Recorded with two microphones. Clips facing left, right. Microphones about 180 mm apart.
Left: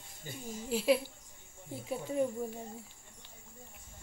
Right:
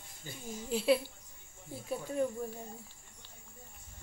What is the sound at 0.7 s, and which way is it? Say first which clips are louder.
Speech: even; 10° left (ahead or behind).